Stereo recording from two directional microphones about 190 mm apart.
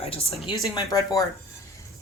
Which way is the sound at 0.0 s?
30° left (ahead or behind).